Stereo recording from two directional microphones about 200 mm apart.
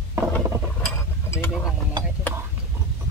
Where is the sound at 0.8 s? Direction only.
15° left (ahead or behind).